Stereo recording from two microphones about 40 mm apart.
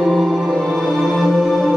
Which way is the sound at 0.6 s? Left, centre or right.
Centre.